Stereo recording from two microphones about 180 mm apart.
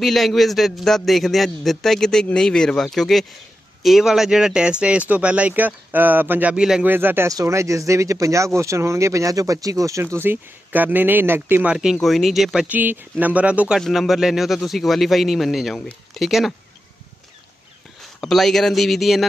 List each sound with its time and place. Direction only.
0.0 s speech: centre (ahead or behind)
18.2 s speech: centre (ahead or behind)